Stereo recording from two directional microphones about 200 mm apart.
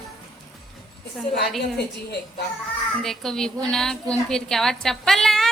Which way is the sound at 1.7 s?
55° left (ahead or behind).